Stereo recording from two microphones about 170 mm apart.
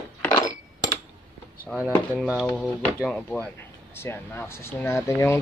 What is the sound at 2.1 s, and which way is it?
Speech, centre (ahead or behind).